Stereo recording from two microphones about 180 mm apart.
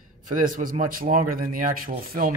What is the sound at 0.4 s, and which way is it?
Speech, 45° right (ahead or behind).